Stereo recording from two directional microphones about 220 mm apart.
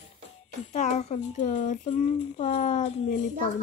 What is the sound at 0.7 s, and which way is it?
Speech, 30° left (ahead or behind).